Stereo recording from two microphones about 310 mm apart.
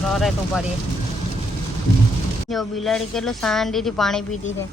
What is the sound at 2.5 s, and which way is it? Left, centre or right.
A woman's voice, centre.